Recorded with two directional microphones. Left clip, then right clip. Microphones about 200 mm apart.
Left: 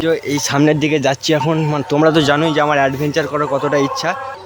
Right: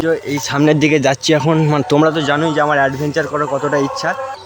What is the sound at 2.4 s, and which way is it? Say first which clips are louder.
Speech: even; centre (ahead or behind).